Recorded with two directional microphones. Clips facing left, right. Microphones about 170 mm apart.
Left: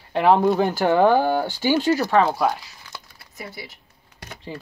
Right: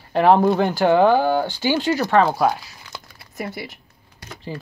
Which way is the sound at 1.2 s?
10° left (ahead or behind).